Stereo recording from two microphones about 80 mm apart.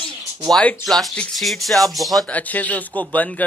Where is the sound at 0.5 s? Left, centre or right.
Centre.